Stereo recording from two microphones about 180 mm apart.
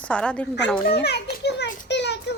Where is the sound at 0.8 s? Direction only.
60° left (ahead or behind).